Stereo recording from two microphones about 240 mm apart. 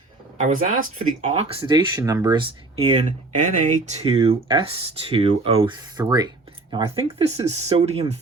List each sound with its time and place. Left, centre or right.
0.4 s speech: right